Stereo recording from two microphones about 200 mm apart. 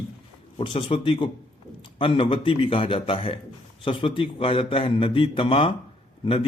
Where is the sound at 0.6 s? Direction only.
30° left (ahead or behind).